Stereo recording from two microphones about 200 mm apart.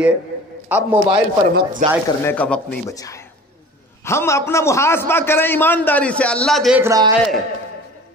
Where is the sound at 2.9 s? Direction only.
15° left (ahead or behind); by 6.8 s centre (ahead or behind).